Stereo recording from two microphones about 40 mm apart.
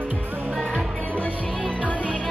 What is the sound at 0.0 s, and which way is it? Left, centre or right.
Music, right.